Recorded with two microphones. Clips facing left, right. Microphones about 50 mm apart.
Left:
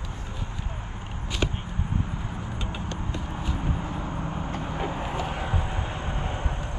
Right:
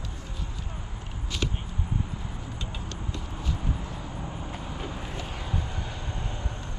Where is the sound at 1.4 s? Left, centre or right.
Left.